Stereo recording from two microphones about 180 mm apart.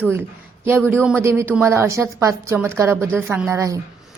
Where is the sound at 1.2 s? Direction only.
15° right (ahead or behind).